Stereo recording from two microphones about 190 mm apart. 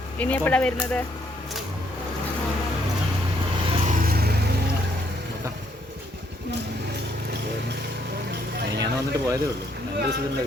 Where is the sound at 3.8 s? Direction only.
45° right (ahead or behind).